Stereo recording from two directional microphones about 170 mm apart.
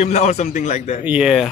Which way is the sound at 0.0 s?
45° left (ahead or behind).